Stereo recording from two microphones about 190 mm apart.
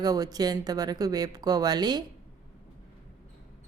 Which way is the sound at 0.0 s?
20° right (ahead or behind).